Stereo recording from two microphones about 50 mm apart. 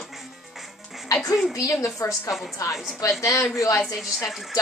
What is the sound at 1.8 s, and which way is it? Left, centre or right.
Speech, left.